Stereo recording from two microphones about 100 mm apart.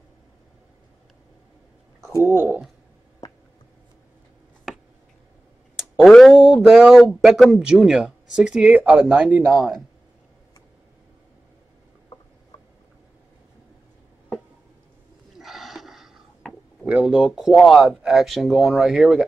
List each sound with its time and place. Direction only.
2.2 s speech: 20° right (ahead or behind)
3.2 s a sound: 40° left (ahead or behind)
5.8 s speech: centre (ahead or behind)
9.5 s speech: centre (ahead or behind)
15.3 s a sound: centre (ahead or behind)
17.8 s speech: 5° right (ahead or behind)